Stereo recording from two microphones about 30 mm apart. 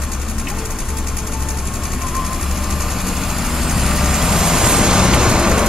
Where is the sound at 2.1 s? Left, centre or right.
Centre.